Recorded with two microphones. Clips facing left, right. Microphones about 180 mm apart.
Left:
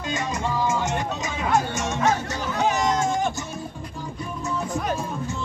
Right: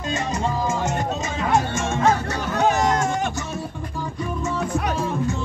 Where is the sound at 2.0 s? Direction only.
60° right (ahead or behind).